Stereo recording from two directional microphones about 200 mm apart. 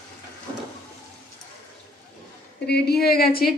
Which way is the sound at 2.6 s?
55° left (ahead or behind).